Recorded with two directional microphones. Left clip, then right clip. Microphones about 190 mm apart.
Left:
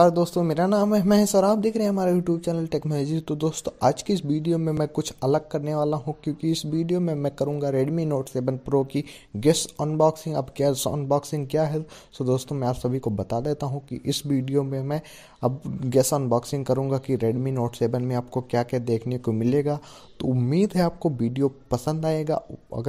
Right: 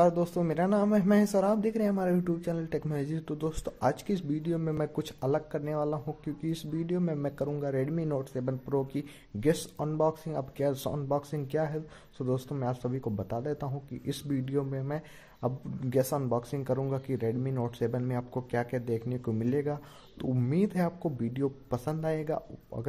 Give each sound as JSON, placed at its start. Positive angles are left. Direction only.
{"t": 0.0, "sound": "speech", "side_deg": 30}